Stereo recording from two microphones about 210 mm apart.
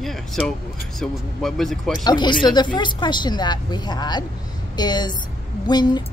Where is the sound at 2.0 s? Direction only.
20° left (ahead or behind).